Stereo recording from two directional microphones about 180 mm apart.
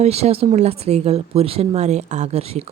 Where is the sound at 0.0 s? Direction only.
35° right (ahead or behind).